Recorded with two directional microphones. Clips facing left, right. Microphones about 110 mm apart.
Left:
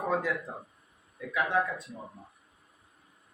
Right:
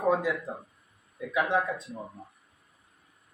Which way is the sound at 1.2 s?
15° right (ahead or behind).